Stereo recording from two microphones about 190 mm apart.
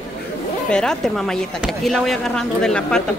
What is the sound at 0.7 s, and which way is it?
Speech, 5° left (ahead or behind).